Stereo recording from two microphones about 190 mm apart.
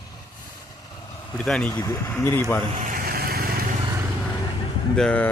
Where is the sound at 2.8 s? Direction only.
45° right (ahead or behind).